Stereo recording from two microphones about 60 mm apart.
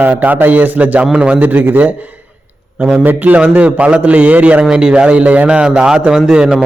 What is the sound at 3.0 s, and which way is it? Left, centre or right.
A man's voice, right.